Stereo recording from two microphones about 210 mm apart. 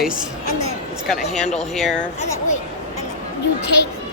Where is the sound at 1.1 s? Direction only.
Centre (ahead or behind).